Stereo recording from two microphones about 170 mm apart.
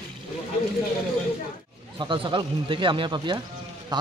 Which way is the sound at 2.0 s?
30° right (ahead or behind).